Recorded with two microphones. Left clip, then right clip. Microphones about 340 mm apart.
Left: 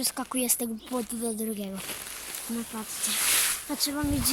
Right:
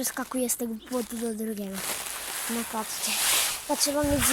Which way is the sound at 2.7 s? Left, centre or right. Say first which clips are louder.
Right 7 dB; centre.